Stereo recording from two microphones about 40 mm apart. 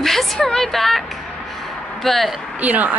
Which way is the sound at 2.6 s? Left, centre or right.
Right.